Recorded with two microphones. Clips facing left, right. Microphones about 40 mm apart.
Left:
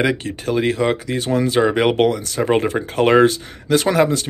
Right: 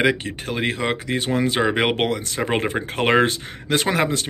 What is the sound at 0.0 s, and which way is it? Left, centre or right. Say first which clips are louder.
Speech: left 1 dB; right.